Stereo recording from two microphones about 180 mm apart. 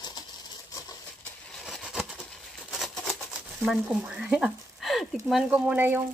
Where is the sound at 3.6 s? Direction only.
5° right (ahead or behind).